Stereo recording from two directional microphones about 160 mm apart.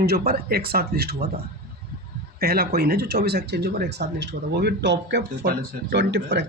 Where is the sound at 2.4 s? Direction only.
75° right (ahead or behind); by 6.5 s 90° right.